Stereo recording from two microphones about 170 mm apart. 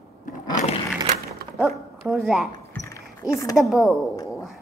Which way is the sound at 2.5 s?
20° left (ahead or behind).